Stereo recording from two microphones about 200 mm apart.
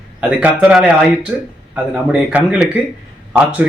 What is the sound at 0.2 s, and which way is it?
Speech, 5° right (ahead or behind).